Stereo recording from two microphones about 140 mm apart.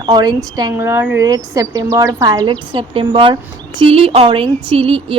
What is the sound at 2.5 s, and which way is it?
A woman's voice, 40° right (ahead or behind).